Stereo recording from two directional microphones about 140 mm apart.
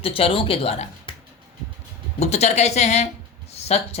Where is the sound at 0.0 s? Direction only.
40° left (ahead or behind).